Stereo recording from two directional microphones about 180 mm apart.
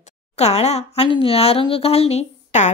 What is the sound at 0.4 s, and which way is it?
Speech, 35° left (ahead or behind).